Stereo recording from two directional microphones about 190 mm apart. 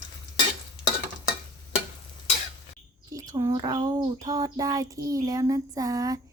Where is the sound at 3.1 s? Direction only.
15° right (ahead or behind).